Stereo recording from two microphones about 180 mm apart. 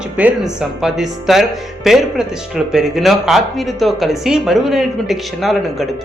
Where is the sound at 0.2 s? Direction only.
5° right (ahead or behind).